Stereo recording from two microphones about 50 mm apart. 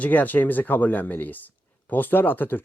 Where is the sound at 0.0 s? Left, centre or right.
Left.